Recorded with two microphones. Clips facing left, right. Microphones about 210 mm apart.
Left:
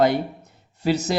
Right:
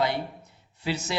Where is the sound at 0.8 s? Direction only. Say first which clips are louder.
Left 8 dB; 40° left (ahead or behind).